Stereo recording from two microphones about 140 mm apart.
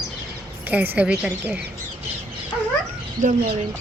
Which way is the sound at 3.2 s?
75° right (ahead or behind).